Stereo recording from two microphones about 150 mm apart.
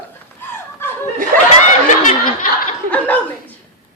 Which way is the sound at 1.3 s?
70° right (ahead or behind).